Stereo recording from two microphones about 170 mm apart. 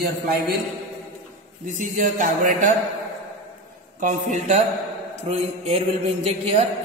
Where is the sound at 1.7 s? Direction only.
45° right (ahead or behind).